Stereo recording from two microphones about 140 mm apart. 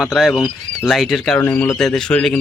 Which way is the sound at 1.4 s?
15° left (ahead or behind).